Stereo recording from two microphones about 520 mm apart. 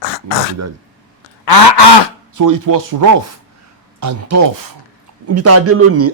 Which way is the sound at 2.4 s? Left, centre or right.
Right.